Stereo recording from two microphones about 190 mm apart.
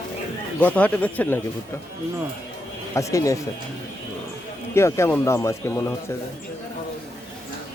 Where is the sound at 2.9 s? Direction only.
15° left (ahead or behind).